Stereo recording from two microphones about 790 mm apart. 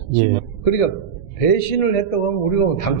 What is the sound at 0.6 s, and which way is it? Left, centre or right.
A man's voice, left.